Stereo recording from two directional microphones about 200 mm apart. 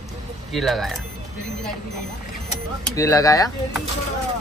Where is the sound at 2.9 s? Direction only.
15° left (ahead or behind).